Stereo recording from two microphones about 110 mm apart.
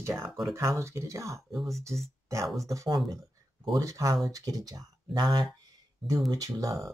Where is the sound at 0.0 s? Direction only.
25° right (ahead or behind).